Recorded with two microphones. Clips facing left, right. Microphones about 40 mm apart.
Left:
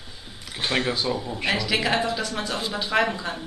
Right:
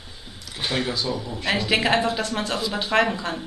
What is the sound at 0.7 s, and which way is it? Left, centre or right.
Speech, left.